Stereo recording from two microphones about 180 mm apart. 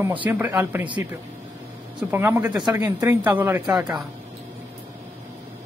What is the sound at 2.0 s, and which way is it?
Speech, 10° right (ahead or behind).